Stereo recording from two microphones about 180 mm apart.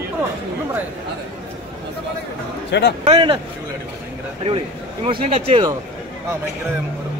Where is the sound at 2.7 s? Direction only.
75° left (ahead or behind).